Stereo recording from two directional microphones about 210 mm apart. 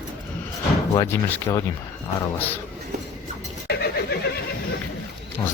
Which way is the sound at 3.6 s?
50° left (ahead or behind).